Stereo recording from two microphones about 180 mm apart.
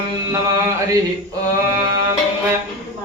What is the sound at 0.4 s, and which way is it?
Music, 20° right (ahead or behind).